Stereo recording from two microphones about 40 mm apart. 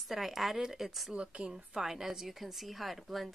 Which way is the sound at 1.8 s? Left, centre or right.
Centre.